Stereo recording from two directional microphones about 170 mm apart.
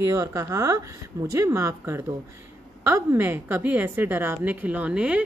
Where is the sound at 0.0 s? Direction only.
20° right (ahead or behind).